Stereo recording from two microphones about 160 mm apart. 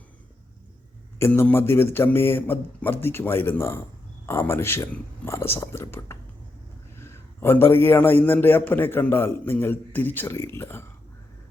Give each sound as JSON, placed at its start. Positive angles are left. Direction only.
{"t": 1.2, "sound": "a man's voice", "side_deg": 10}